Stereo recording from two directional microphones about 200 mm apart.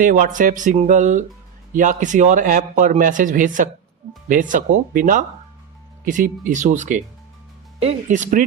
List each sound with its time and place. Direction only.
0.0 s speech: 40° right (ahead or behind)